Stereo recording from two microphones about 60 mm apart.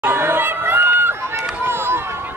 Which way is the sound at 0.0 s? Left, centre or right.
Right.